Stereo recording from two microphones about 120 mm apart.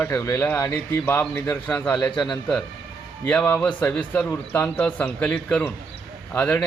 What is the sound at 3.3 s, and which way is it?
A man's voice, 10° left (ahead or behind).